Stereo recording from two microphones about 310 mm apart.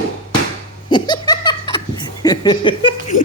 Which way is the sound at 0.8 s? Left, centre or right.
Centre.